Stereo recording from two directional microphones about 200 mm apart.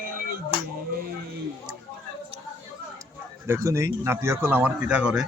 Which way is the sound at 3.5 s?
15° right (ahead or behind).